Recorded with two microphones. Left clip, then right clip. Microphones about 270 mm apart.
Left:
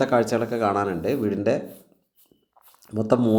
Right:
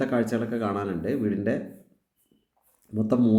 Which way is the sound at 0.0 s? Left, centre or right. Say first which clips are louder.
Left 6 dB; centre.